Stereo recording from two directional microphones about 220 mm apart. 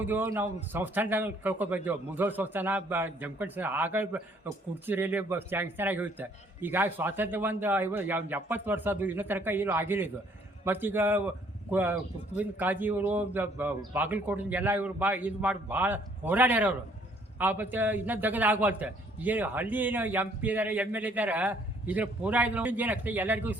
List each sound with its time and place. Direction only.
0.0 s a man's voice: 10° right (ahead or behind)